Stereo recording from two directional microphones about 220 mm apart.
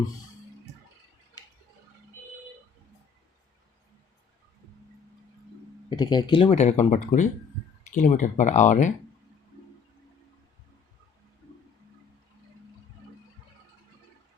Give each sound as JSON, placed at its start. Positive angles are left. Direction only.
{"t": 5.9, "sound": "speech", "side_deg": 20}